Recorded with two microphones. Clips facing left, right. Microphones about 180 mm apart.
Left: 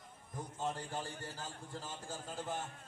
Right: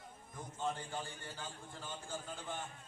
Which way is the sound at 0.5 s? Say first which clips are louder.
Even; 40° left (ahead or behind).